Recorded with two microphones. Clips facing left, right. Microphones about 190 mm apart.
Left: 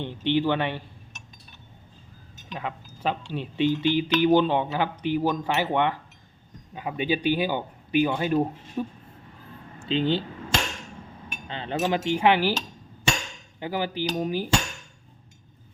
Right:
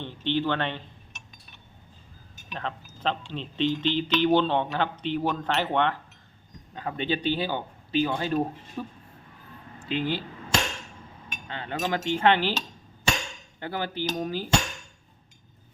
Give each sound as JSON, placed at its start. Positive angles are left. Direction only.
{"t": 0.0, "sound": "speech", "side_deg": 15}
{"t": 2.5, "sound": "speech", "side_deg": 10}
{"t": 9.9, "sound": "speech", "side_deg": 25}
{"t": 11.4, "sound": "speech", "side_deg": 20}
{"t": 11.8, "sound": "speech", "side_deg": 10}
{"t": 13.6, "sound": "speech", "side_deg": 15}